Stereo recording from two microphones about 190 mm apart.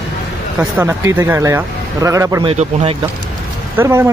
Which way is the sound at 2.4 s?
30° right (ahead or behind).